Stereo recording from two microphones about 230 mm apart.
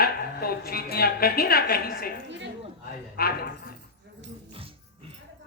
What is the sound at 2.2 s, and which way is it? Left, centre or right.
Speech, right.